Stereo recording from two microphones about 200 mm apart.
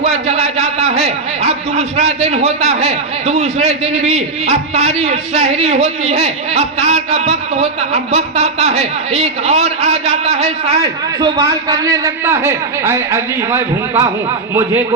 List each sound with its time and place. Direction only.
0.0 s a man's voice: 30° right (ahead or behind)
11.2 s a man's voice: 20° right (ahead or behind)